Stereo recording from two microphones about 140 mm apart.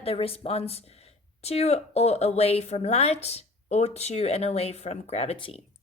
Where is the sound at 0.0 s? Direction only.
45° left (ahead or behind).